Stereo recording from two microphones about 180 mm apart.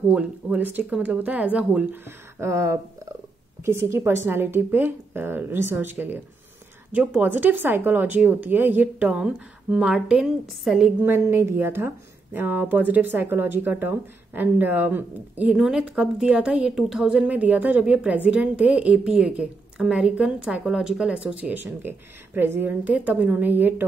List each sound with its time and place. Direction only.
0.1 s speech: 5° right (ahead or behind)